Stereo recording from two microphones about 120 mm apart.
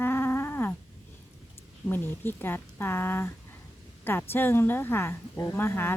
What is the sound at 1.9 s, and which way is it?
A woman's voice, 15° left (ahead or behind).